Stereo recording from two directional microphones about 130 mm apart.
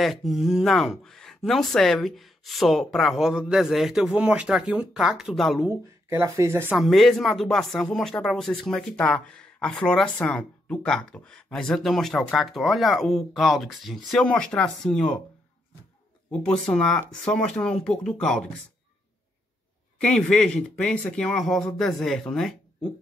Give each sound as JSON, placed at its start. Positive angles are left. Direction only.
{"t": 0.0, "sound": "speech", "side_deg": 0}
{"t": 5.7, "sound": "speech", "side_deg": -20}
{"t": 6.8, "sound": "speech", "side_deg": 0}
{"t": 16.3, "sound": "speech", "side_deg": 5}
{"t": 20.0, "sound": "speech", "side_deg": 5}